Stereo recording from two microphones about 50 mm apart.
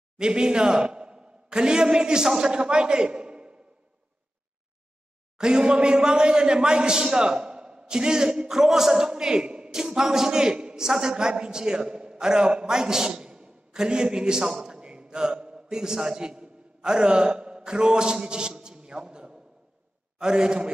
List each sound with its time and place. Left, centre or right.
0.2 s a man's voice: centre
5.4 s a man's voice: centre
14.7 s a sound: centre
20.2 s a man's voice: centre